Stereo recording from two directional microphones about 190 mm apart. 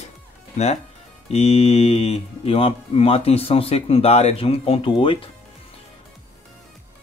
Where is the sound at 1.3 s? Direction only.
30° left (ahead or behind).